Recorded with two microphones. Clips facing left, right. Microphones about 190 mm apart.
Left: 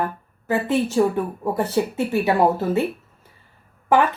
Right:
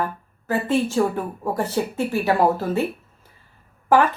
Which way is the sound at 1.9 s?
60° left (ahead or behind).